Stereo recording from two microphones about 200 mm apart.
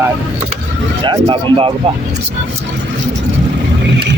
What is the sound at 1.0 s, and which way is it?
Speech, 25° right (ahead or behind).